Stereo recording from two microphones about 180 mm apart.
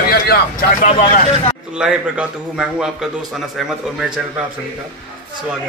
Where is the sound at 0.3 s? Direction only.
50° left (ahead or behind).